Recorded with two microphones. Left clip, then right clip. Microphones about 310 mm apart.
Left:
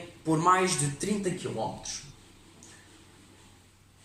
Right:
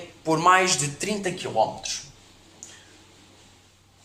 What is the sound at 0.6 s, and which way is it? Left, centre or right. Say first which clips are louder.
Speech: right 5 dB; centre.